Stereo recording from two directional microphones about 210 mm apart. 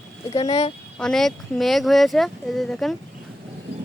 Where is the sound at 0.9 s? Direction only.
5° left (ahead or behind).